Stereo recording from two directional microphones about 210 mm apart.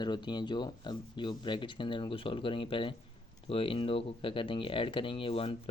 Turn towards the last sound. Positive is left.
turn(degrees=25)  # may be behind; listen again after turning